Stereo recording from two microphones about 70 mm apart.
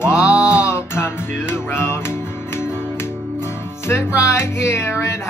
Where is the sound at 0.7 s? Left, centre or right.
Left.